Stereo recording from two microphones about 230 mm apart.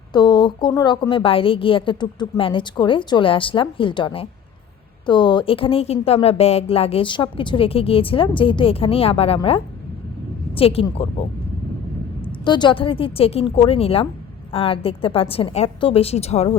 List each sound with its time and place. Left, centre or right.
0.1 s a woman's voice: centre
12.5 s a woman's voice: centre